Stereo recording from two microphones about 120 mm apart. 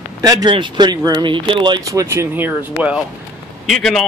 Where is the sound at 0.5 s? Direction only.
40° right (ahead or behind).